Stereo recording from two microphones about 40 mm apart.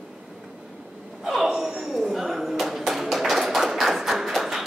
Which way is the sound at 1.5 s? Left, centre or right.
Centre.